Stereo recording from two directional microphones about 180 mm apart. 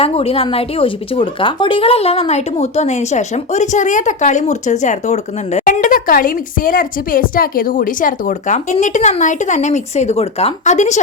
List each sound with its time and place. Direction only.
0.0 s speech: 35° left (ahead or behind)